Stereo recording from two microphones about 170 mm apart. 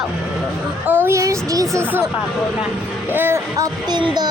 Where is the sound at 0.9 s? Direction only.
15° right (ahead or behind).